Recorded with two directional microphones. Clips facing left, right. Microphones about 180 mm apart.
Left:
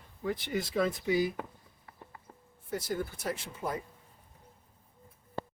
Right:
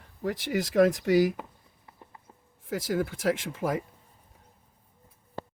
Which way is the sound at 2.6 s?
90° right.